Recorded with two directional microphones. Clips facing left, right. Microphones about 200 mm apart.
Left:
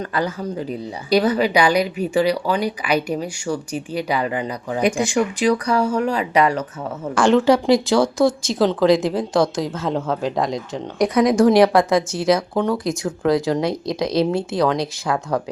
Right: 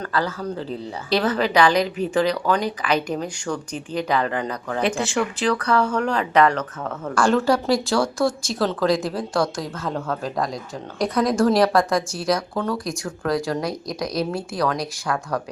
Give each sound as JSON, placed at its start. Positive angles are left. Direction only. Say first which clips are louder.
{"t": 0.0, "sound": "a woman's voice", "louder": "left 2 dB", "side_deg": 20}
{"t": 7.2, "sound": "a woman's voice", "louder": "left 4 dB", "side_deg": 0}
{"t": 8.2, "sound": "a woman's voice", "louder": "left 5 dB", "side_deg": 20}